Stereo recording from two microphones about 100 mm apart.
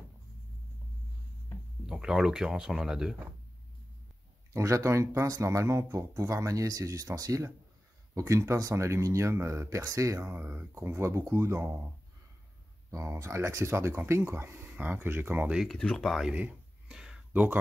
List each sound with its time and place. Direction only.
1.9 s speech: 5° right (ahead or behind)
4.6 s speech: 30° right (ahead or behind)
10.2 s speech: 20° right (ahead or behind)
12.9 s speech: 30° right (ahead or behind)
15.5 s speech: centre (ahead or behind)
16.3 s a sound: 15° right (ahead or behind)
17.3 s speech: 20° right (ahead or behind)